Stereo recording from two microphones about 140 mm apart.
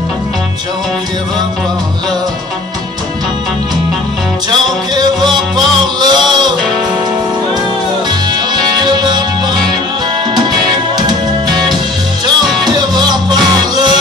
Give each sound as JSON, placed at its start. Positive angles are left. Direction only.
{"t": 4.5, "sound": "music", "side_deg": -30}
{"t": 8.3, "sound": "music", "side_deg": -30}
{"t": 12.6, "sound": "music", "side_deg": -30}